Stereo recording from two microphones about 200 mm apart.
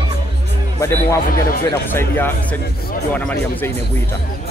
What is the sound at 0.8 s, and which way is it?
Speech, 15° left (ahead or behind).